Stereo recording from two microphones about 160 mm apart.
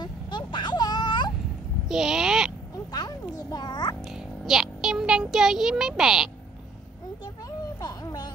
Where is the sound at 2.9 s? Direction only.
25° left (ahead or behind).